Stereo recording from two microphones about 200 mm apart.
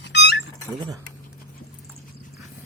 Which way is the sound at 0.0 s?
60° left (ahead or behind).